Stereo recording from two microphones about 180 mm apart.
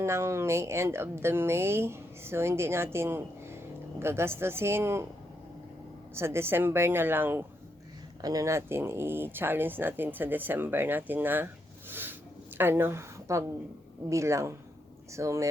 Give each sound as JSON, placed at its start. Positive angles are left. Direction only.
{"t": 0.0, "sound": "a woman's voice", "side_deg": -15}
{"t": 6.1, "sound": "a woman's voice", "side_deg": -15}
{"t": 11.9, "sound": "a sound", "side_deg": -10}
{"t": 12.5, "sound": "a woman's voice", "side_deg": -10}